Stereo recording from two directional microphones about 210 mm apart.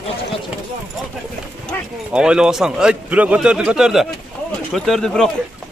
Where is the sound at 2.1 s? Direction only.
5° right (ahead or behind).